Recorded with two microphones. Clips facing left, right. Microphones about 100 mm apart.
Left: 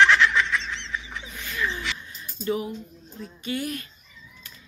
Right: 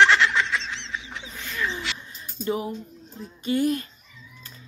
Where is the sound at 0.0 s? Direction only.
Centre (ahead or behind).